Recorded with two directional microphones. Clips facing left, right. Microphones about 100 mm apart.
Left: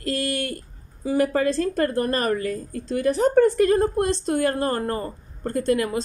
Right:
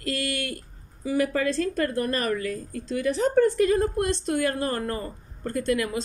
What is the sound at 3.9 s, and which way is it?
A woman's voice, 35° left (ahead or behind).